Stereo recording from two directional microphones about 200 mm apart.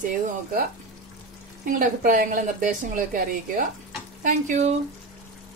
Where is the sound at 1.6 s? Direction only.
45° right (ahead or behind).